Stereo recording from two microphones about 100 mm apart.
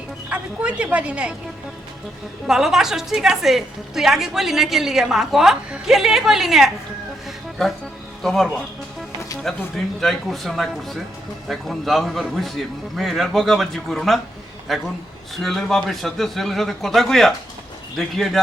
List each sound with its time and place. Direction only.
0.3 s speech: 10° right (ahead or behind)
2.5 s a woman's voice: 5° right (ahead or behind)
8.2 s a woman's voice: centre (ahead or behind)